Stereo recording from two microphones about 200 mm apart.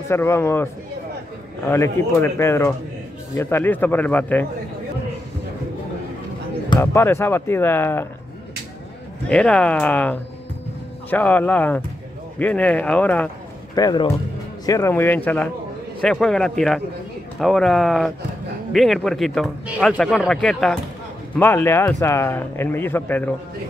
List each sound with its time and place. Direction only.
0.1 s speech: 10° left (ahead or behind)
1.7 s speech: 15° left (ahead or behind)
6.7 s speech: 15° left (ahead or behind)
9.3 s speech: 5° left (ahead or behind)
13.7 s speech: 20° left (ahead or behind)